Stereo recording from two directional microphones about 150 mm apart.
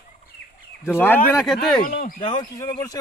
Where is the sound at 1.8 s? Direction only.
70° left (ahead or behind).